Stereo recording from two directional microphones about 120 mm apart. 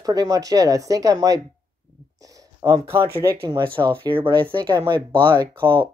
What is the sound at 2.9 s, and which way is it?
Speech, 20° right (ahead or behind).